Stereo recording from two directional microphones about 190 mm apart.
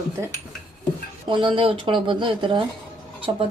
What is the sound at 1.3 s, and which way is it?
A woman's voice, 25° right (ahead or behind).